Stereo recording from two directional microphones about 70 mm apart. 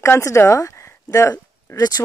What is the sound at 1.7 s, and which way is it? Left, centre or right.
Speech, left.